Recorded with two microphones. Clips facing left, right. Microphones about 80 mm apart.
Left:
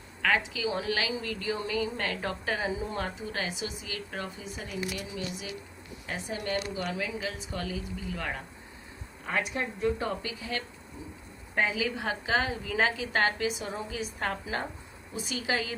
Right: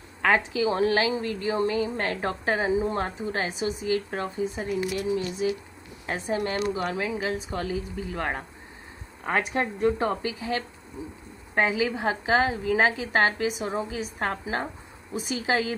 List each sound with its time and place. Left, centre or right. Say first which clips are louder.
0.2 s a woman's voice: right 5 dB; right
9.2 s a woman's voice: right 5 dB; right
10.0 s a woman's voice: right 6 dB; right